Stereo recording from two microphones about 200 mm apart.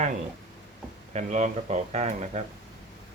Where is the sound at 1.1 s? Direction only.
35° right (ahead or behind).